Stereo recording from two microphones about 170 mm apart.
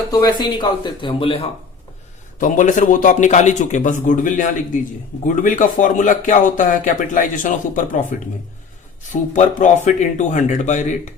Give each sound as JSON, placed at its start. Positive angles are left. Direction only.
{"t": 0.1, "sound": "speech", "side_deg": 25}
{"t": 2.4, "sound": "speech", "side_deg": 50}
{"t": 9.3, "sound": "speech", "side_deg": 45}